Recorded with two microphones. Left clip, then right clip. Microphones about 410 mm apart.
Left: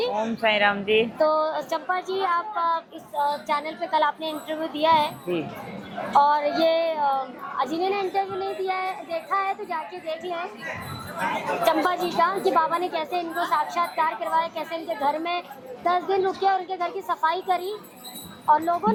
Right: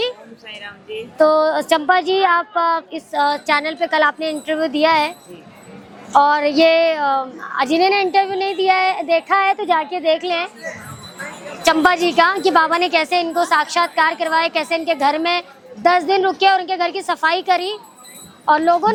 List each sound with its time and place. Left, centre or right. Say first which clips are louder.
0.4 s speech: left 12 dB; left
1.2 s a woman's voice: right 8 dB; right
1.9 s speech: right 9 dB; right
6.1 s a woman's voice: right 6 dB; right
11.6 s a woman's voice: right 10 dB; right